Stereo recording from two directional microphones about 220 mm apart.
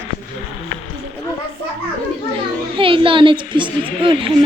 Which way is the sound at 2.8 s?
25° right (ahead or behind).